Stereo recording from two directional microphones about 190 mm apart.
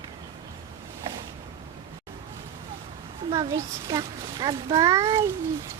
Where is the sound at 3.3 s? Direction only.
15° right (ahead or behind).